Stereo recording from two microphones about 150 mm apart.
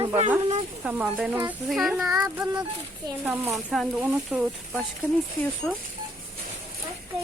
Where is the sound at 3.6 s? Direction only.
Centre (ahead or behind).